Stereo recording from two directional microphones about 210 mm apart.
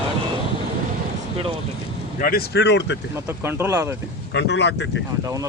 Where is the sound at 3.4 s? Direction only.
10° right (ahead or behind).